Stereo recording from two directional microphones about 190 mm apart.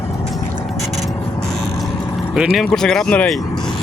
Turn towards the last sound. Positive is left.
turn(degrees=5)  # may be behind; listen again after turning